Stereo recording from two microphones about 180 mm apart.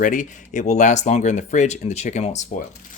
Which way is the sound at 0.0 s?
45° left (ahead or behind).